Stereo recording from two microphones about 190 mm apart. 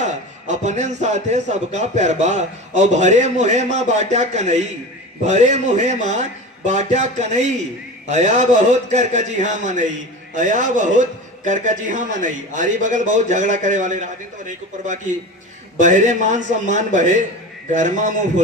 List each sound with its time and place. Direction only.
0.0 s a man's voice: 40° right (ahead or behind)
15.8 s a man's voice: 40° right (ahead or behind)